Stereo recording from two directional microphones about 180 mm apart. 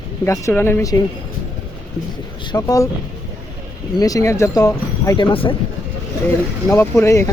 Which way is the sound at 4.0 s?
20° left (ahead or behind).